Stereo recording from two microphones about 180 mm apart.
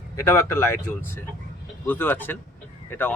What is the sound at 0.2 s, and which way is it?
Speech, 15° left (ahead or behind).